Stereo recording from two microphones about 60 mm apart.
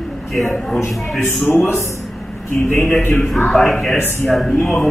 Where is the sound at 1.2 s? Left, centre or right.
Left.